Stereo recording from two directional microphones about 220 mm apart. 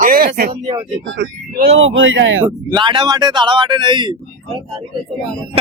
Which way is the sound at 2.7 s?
20° right (ahead or behind).